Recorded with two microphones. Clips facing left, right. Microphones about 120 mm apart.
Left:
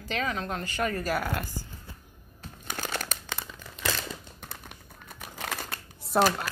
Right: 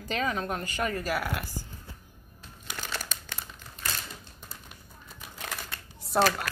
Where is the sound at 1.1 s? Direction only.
5° right (ahead or behind).